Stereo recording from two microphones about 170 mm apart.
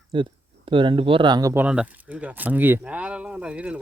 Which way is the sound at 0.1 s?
30° right (ahead or behind).